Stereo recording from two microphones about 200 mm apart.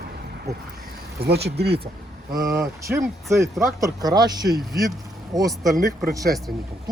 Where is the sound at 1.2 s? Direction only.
55° right (ahead or behind).